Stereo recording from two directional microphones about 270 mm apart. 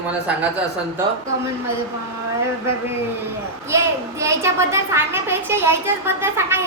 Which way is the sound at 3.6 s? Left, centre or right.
Centre.